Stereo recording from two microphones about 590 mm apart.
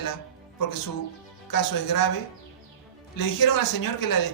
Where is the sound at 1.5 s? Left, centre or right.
Left.